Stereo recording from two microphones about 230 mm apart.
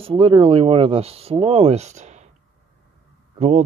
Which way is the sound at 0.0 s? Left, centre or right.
Right.